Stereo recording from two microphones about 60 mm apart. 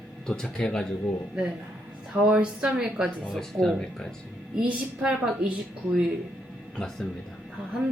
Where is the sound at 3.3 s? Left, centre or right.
Centre.